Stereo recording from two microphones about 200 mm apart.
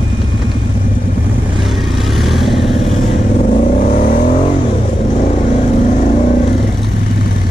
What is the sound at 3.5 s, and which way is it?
Vehicle, 35° left (ahead or behind).